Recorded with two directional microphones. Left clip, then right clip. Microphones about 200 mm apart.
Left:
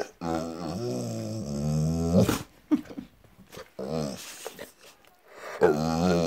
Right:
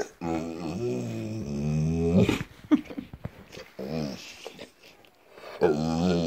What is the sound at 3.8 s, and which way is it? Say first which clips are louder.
Dog: left 2 dB; 20° left (ahead or behind).